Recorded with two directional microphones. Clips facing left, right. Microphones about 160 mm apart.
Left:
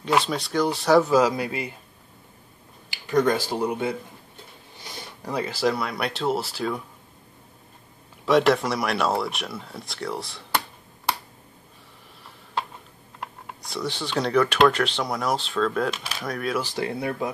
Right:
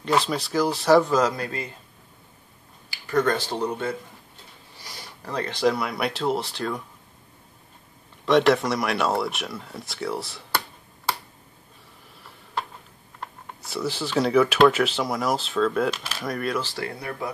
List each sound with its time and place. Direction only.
0.0 s speech: centre (ahead or behind)
2.9 s speech: 15° left (ahead or behind)
5.2 s speech: 5° left (ahead or behind)
8.3 s speech: centre (ahead or behind)
13.6 s speech: 5° right (ahead or behind)
16.6 s speech: 20° left (ahead or behind)